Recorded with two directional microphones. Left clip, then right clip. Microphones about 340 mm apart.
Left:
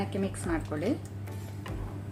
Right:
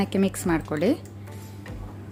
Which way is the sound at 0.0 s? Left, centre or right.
Right.